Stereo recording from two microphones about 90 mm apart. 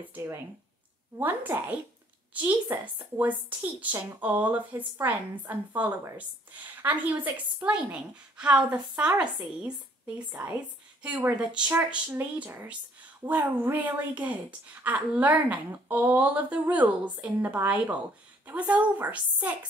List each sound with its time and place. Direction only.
0.1 s a woman's voice: 25° right (ahead or behind)
10.1 s a woman's voice: 20° right (ahead or behind)
13.2 s a woman's voice: 20° right (ahead or behind)